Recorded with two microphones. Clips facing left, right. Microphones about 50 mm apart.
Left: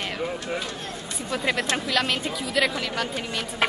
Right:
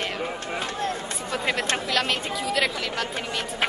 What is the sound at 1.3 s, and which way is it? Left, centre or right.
Speech, centre.